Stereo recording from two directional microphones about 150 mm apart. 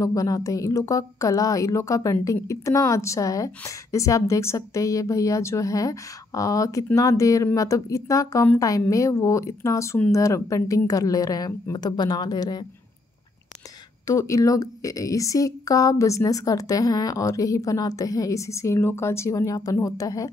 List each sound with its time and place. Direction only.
0.0 s a woman's voice: 20° left (ahead or behind)
14.0 s a woman's voice: 20° left (ahead or behind)